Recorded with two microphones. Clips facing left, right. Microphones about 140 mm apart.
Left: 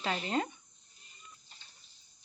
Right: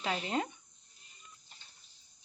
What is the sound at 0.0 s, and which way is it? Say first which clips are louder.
Speech: left 1 dB; 10° right (ahead or behind).